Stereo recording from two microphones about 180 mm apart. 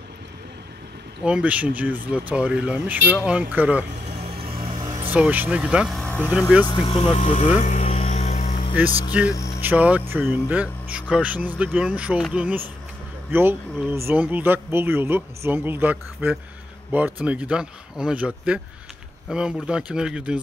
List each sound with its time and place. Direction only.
1.2 s speech: 5° right (ahead or behind)
4.8 s speech: 15° right (ahead or behind); by 6.3 s 5° left (ahead or behind)
6.6 s music: 25° left (ahead or behind); by 8.5 s 45° left (ahead or behind)
8.8 s speech: 10° right (ahead or behind)
9.3 s a sound: 20° left (ahead or behind)
9.6 s speech: 10° right (ahead or behind)